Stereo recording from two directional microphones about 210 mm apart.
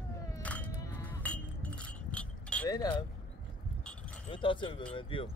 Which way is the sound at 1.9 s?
5° left (ahead or behind).